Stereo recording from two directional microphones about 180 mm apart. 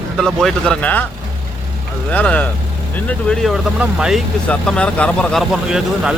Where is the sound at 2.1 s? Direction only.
10° left (ahead or behind).